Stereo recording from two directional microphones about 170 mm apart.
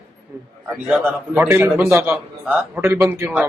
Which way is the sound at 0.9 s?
5° right (ahead or behind).